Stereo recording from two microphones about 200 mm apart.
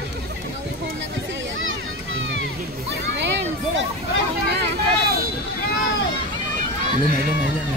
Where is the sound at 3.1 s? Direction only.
60° right (ahead or behind).